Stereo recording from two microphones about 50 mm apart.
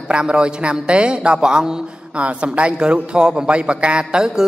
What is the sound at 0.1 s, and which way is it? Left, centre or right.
A man's voice, centre.